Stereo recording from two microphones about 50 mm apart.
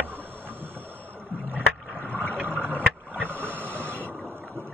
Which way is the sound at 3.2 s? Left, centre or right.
Right.